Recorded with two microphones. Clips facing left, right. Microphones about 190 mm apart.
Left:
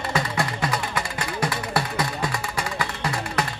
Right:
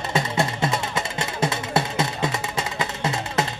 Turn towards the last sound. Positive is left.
turn(degrees=-25)  # may be behind; listen again after turning